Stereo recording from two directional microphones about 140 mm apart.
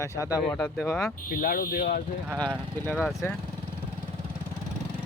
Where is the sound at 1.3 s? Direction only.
90° left.